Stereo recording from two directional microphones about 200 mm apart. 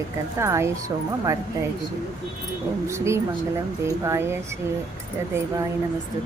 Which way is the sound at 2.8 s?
15° right (ahead or behind).